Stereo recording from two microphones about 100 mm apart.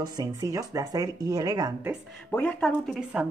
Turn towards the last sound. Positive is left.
turn(degrees=-15)  # may be behind; listen again after turning